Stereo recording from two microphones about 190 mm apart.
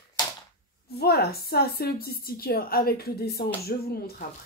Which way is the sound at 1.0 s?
55° left (ahead or behind).